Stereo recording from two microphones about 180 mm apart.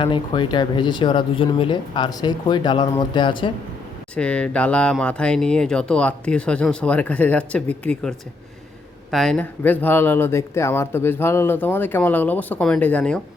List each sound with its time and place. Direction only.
0.0 s speech: 25° left (ahead or behind)
4.1 s speech: 5° left (ahead or behind)